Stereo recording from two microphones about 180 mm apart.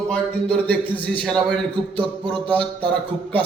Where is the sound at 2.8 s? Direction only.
10° left (ahead or behind).